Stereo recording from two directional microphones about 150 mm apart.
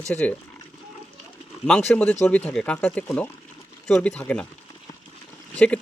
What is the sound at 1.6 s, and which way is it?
Speech, 5° left (ahead or behind).